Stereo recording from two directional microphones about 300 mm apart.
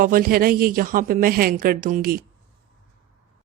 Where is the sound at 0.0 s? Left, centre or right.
Right.